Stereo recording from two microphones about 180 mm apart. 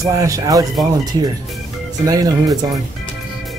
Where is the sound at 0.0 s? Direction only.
20° right (ahead or behind).